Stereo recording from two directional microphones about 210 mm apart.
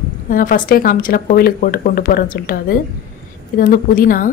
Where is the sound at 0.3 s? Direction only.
40° left (ahead or behind).